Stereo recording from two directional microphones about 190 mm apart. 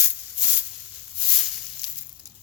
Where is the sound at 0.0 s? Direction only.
5° right (ahead or behind).